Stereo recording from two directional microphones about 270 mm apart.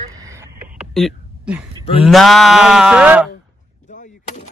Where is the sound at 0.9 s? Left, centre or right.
Centre.